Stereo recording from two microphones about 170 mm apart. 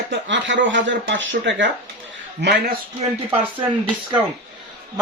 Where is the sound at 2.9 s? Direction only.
35° right (ahead or behind).